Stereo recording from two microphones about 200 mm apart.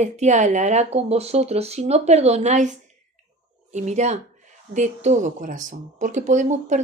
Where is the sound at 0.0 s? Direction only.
35° right (ahead or behind).